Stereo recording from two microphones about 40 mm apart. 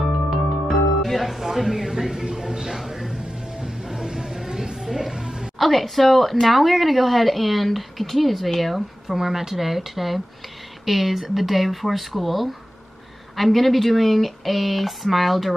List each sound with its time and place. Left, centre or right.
0.7 s speech: centre
2.9 s music: centre
3.2 s music: right
5.6 s speech: centre